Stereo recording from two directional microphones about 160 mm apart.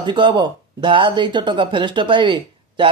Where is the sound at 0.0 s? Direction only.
30° right (ahead or behind).